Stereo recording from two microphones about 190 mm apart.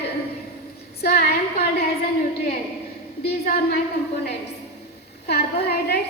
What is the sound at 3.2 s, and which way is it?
Speech, 55° left (ahead or behind).